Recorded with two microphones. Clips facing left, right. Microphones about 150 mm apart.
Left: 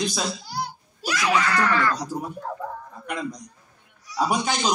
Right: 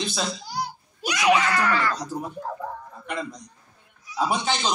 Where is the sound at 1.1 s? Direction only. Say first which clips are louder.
Right 4 dB; 20° right (ahead or behind).